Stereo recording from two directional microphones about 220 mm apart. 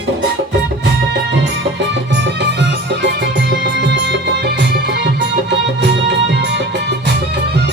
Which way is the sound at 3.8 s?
50° right (ahead or behind).